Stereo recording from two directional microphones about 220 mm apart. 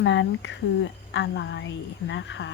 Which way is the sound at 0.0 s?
55° left (ahead or behind).